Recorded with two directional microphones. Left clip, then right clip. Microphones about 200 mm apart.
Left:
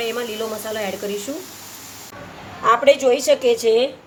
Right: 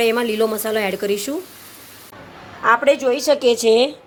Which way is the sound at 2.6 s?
10° right (ahead or behind).